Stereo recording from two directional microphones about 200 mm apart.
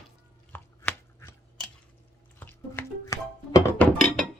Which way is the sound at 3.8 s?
5° left (ahead or behind).